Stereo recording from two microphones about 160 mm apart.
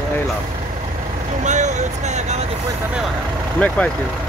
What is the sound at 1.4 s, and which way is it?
Speech, 50° right (ahead or behind).